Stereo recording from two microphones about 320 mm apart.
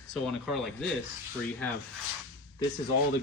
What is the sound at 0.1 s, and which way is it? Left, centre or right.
Speech, centre.